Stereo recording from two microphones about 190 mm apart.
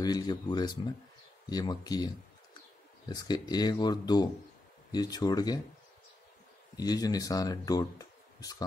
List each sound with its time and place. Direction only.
0.0 s speech: 20° left (ahead or behind)
6.8 s speech: 20° left (ahead or behind)